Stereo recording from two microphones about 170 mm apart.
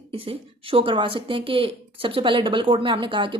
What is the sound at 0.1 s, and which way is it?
A woman's voice, 35° right (ahead or behind).